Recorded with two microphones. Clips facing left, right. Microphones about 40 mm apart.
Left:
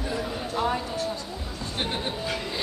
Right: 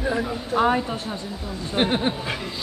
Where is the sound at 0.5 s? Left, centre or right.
Right.